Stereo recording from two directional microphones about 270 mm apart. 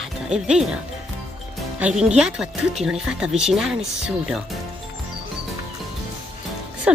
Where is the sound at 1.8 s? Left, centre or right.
Centre.